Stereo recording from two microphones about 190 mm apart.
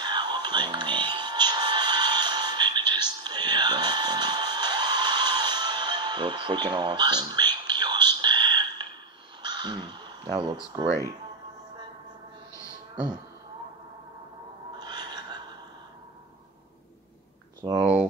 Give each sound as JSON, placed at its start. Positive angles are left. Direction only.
{"t": 0.0, "sound": "music", "side_deg": -25}
{"t": 9.4, "sound": "crow", "side_deg": -20}
{"t": 14.8, "sound": "a sound", "side_deg": -20}
{"t": 17.6, "sound": "speech", "side_deg": -20}